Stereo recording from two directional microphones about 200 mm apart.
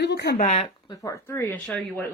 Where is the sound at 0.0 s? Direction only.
55° left (ahead or behind).